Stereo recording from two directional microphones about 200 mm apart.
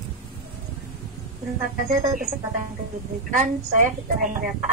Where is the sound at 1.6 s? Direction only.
40° right (ahead or behind).